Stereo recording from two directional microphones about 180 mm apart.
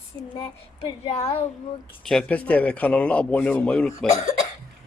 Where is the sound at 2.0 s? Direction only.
5° left (ahead or behind).